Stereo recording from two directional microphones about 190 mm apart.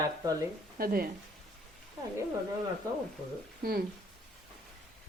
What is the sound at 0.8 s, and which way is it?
Speech, 50° right (ahead or behind).